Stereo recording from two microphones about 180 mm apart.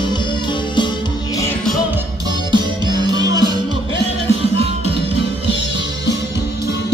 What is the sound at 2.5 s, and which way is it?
Music, 25° right (ahead or behind).